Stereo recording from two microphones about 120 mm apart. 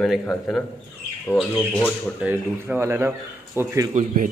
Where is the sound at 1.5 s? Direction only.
15° left (ahead or behind).